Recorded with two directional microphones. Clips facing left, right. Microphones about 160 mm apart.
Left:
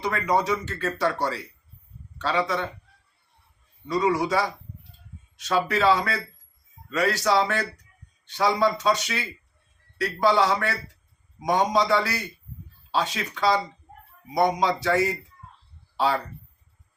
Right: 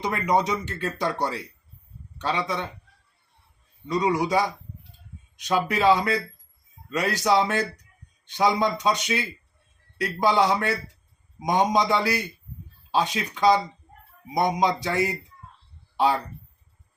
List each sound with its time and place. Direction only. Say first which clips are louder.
0.0 s speech: right 1 dB; 20° right (ahead or behind)
3.8 s speech: even; 20° right (ahead or behind)
5.5 s speech: right 1 dB; 15° right (ahead or behind)